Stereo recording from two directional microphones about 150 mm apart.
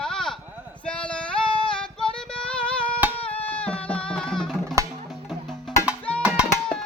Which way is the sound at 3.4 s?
10° left (ahead or behind).